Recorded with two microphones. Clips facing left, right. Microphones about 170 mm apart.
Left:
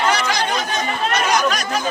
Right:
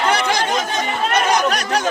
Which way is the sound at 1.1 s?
60° right (ahead or behind).